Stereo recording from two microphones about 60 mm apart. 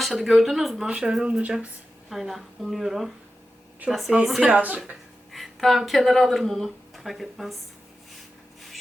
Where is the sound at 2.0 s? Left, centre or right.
Centre.